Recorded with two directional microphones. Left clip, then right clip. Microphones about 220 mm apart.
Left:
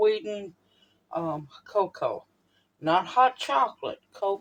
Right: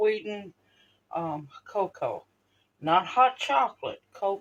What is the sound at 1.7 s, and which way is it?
A man's voice, 30° left (ahead or behind).